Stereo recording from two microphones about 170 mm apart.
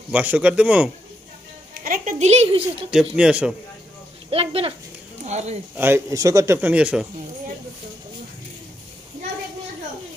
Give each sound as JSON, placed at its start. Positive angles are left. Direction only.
{"t": 0.1, "sound": "a man's voice", "side_deg": -10}
{"t": 1.7, "sound": "music", "side_deg": -50}
{"t": 2.9, "sound": "speech", "side_deg": -5}
{"t": 4.3, "sound": "speech", "side_deg": -35}
{"t": 5.8, "sound": "a man's voice", "side_deg": -15}